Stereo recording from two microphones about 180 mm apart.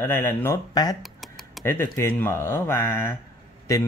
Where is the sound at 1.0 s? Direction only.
Centre (ahead or behind).